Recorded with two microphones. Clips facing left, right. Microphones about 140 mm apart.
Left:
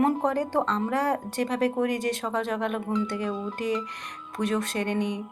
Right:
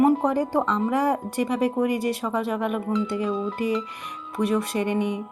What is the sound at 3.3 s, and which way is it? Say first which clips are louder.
Speech: right 5 dB; 90° right.